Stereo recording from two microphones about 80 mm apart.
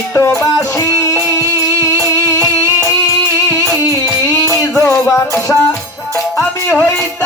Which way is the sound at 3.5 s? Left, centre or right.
Left.